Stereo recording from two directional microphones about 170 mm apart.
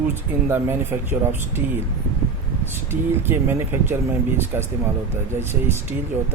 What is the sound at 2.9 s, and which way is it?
Speech, 15° right (ahead or behind).